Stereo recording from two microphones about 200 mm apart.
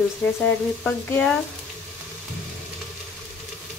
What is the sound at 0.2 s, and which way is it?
Speech, 5° left (ahead or behind).